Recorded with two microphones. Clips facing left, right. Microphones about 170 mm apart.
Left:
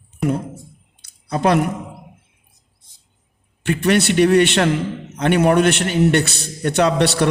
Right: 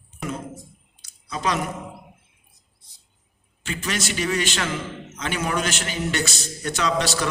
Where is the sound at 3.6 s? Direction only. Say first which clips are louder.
Left 12 dB; 60° left (ahead or behind).